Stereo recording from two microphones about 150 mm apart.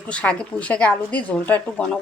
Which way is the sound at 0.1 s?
5° left (ahead or behind).